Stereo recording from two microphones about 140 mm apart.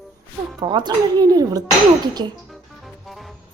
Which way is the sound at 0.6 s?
30° right (ahead or behind).